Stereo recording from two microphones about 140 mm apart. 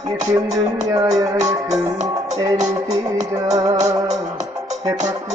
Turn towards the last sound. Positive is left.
turn(degrees=-25)  # may be behind; listen again after turning